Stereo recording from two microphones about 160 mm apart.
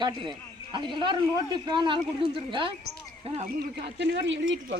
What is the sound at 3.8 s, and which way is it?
Speech, 90° right.